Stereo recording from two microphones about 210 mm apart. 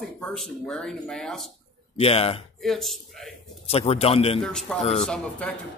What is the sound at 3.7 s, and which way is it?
Speech, 30° left (ahead or behind).